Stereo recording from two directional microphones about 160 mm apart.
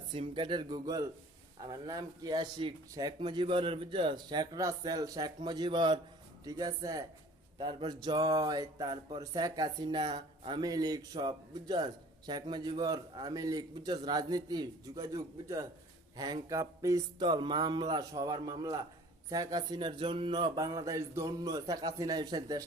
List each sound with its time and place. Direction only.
0.1 s speech: 30° right (ahead or behind)